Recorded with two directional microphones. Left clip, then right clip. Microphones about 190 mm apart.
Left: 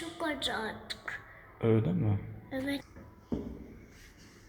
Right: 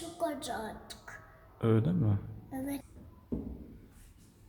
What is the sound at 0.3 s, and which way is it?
Speech, 25° right (ahead or behind).